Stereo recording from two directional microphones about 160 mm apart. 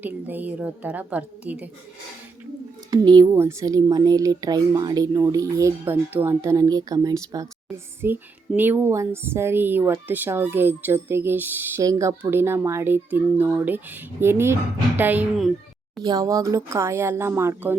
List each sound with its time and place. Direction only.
0.0 s speech: 10° right (ahead or behind)
2.9 s speech: 25° right (ahead or behind); by 15.5 s 5° right (ahead or behind)
16.0 s speech: 20° right (ahead or behind)